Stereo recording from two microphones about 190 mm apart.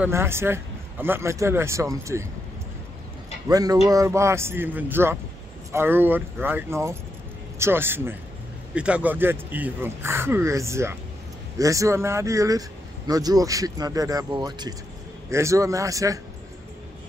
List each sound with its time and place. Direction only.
0.0 s speech: 10° right (ahead or behind)
3.4 s speech: 20° right (ahead or behind)